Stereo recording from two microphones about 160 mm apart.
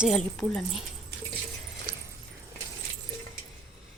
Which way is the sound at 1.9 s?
65° right (ahead or behind).